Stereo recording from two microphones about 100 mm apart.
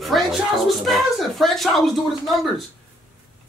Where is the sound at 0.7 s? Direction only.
Centre (ahead or behind).